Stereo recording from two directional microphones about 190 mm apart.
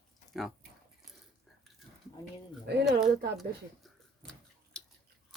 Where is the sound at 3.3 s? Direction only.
Centre (ahead or behind).